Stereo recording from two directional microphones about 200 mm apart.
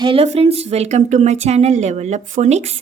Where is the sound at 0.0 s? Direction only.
30° right (ahead or behind).